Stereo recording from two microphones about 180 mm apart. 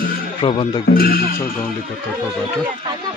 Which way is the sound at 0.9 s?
55° left (ahead or behind).